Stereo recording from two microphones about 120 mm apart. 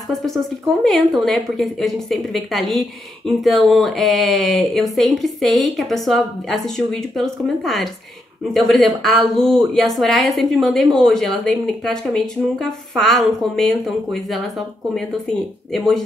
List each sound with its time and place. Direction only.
0.1 s a woman's voice: centre (ahead or behind)
15.7 s a woman's voice: centre (ahead or behind)